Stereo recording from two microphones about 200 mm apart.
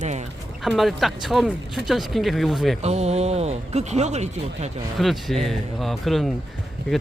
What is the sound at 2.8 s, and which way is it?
Speech, 35° right (ahead or behind).